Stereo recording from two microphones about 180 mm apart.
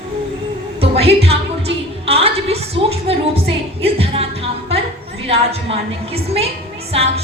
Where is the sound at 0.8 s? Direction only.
35° right (ahead or behind).